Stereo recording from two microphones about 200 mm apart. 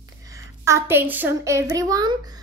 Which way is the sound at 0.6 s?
15° right (ahead or behind).